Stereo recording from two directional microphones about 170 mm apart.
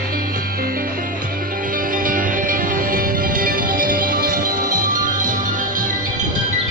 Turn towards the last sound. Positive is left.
turn(degrees=-50)  # may be behind; listen again after turning